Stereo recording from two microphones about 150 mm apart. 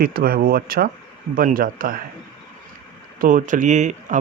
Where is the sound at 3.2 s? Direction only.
65° right (ahead or behind).